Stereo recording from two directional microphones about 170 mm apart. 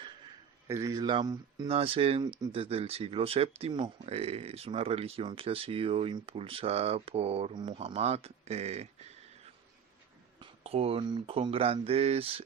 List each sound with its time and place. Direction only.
0.7 s a man's voice: 20° right (ahead or behind)
1.7 s speech: 35° right (ahead or behind)
10.4 s speech: 35° right (ahead or behind)